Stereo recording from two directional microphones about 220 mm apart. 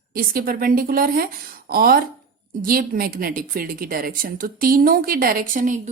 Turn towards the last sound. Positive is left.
turn(degrees=-40)  # may be behind; listen again after turning